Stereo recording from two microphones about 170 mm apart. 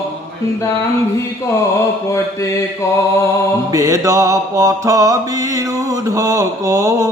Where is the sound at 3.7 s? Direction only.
20° right (ahead or behind).